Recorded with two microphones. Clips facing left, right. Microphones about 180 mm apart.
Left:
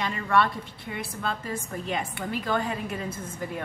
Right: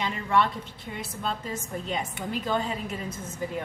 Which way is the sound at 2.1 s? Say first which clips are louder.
Right 1 dB; 20° right (ahead or behind).